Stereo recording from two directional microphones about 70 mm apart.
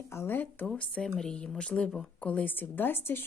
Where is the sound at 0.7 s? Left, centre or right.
Centre.